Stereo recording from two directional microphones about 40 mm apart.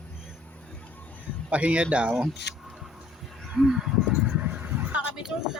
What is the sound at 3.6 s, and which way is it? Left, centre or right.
Speech, centre.